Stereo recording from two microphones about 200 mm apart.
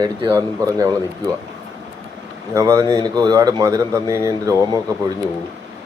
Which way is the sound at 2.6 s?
15° right (ahead or behind).